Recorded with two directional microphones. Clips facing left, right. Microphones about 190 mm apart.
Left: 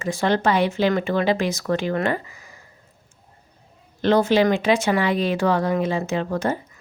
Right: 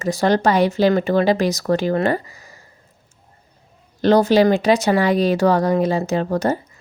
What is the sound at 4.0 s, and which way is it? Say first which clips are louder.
Speech: right 4 dB; 40° right (ahead or behind).